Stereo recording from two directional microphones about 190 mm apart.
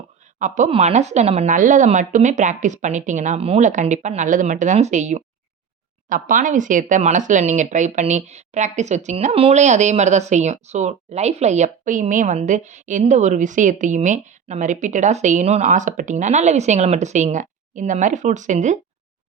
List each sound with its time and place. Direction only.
0.3 s speech: 40° right (ahead or behind)